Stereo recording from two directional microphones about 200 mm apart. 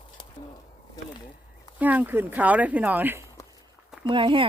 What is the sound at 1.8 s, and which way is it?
Speech, 10° right (ahead or behind).